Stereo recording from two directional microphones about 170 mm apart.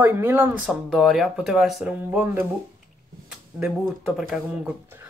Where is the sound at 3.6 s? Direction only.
5° right (ahead or behind).